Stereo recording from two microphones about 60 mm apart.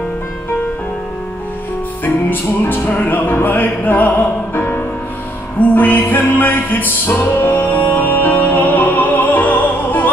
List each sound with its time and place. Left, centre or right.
2.0 s music: left